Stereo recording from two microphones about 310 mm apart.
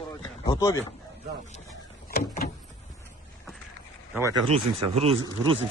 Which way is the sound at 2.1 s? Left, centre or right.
Left.